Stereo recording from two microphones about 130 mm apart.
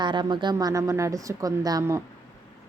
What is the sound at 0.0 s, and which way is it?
A woman's voice, 35° right (ahead or behind).